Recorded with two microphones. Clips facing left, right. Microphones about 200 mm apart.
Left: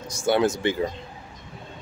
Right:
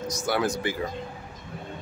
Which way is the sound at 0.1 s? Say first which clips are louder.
Left 6 dB; 25° left (ahead or behind).